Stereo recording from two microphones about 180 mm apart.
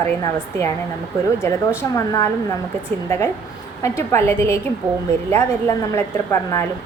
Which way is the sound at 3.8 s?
15° left (ahead or behind).